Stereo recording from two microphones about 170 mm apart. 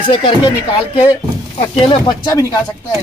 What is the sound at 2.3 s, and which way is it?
Speech, 20° left (ahead or behind).